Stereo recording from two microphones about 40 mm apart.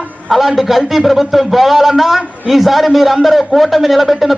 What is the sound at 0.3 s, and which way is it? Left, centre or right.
A man's voice, centre.